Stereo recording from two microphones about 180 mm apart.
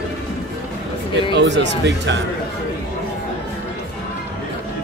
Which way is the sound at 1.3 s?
75° right (ahead or behind).